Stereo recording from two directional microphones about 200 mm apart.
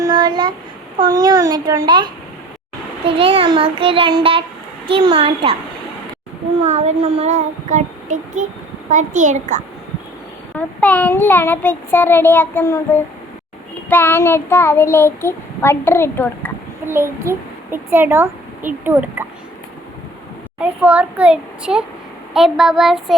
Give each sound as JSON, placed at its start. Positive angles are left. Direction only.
{"t": 0.0, "sound": "a sound", "side_deg": -20}
{"t": 0.9, "sound": "a child's voice", "side_deg": -20}
{"t": 6.6, "sound": "child singing", "side_deg": -35}
{"t": 10.5, "sound": "a child's voice", "side_deg": 5}
{"t": 16.8, "sound": "a child's voice", "side_deg": -10}
{"t": 20.6, "sound": "a child's voice", "side_deg": -5}